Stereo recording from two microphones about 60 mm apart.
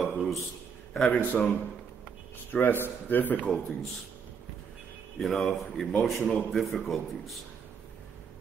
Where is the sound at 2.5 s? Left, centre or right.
Left.